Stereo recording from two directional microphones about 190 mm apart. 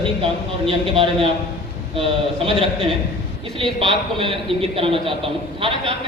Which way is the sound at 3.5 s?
25° right (ahead or behind).